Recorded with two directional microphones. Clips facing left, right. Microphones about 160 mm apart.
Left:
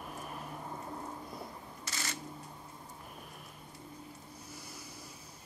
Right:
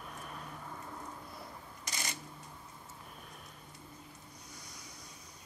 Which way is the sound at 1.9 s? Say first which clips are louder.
Left 1 dB; 15° right (ahead or behind).